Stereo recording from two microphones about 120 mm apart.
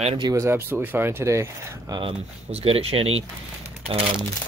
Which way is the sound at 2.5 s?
55° right (ahead or behind).